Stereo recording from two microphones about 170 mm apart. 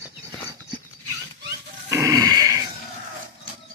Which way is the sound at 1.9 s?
20° right (ahead or behind).